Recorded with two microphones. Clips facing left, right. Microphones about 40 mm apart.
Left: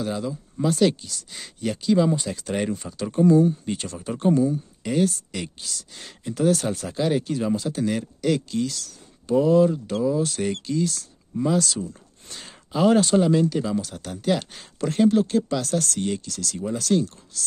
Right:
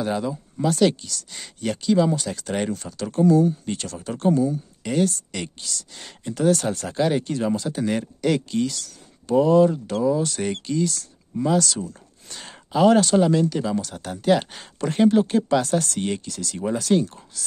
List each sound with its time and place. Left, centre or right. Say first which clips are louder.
0.0 s speech: right 3 dB; centre
0.6 s speech: right 1 dB; centre
2.7 s speech: even; centre
4.8 s speech: even; centre
7.7 s speech: right 1 dB; centre